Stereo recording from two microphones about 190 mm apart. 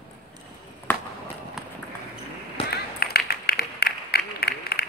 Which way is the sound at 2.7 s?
55° left (ahead or behind).